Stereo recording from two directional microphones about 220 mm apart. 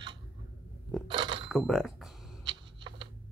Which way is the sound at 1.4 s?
Centre (ahead or behind).